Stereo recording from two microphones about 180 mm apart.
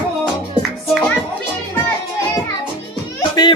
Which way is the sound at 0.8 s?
Centre (ahead or behind).